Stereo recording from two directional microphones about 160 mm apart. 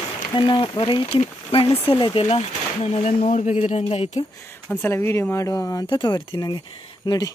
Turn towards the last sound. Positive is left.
turn(degrees=25)  # may be behind; listen again after turning